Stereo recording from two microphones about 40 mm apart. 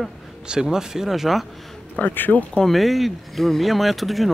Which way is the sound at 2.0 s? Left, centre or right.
Left.